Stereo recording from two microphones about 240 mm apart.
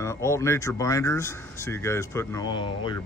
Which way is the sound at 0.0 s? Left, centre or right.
Centre.